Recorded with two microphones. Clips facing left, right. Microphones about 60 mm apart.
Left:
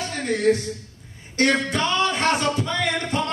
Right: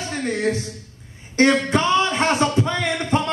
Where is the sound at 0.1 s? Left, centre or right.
Right.